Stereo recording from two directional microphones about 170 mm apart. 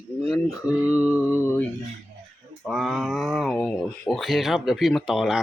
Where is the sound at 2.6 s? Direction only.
Centre (ahead or behind).